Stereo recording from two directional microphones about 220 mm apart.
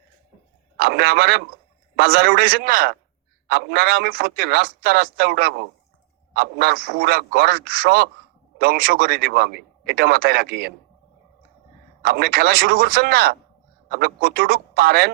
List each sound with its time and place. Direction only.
0.8 s speech: 45° right (ahead or behind)
12.0 s speech: 45° right (ahead or behind)